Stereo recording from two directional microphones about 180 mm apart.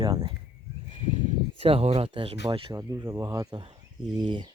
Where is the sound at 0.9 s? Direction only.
40° right (ahead or behind).